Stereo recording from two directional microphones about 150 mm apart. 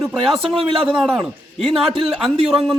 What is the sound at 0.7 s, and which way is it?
Speech, 35° right (ahead or behind).